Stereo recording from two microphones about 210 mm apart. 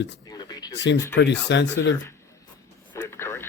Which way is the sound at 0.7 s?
55° left (ahead or behind).